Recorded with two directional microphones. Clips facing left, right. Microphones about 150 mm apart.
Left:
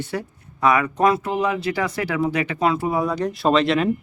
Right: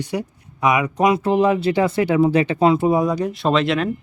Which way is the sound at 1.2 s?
30° right (ahead or behind).